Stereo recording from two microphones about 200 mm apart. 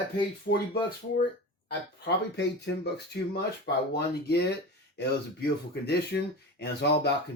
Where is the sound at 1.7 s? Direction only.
55° left (ahead or behind).